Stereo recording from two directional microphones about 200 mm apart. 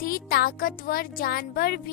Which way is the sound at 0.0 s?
45° left (ahead or behind).